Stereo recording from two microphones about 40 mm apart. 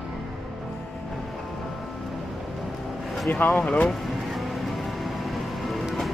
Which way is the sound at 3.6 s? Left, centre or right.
Left.